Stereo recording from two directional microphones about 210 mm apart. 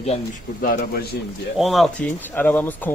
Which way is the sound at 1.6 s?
Centre (ahead or behind).